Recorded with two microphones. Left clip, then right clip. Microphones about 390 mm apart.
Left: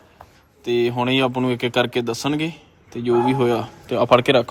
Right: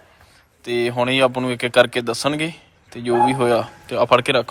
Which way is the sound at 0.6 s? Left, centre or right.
Centre.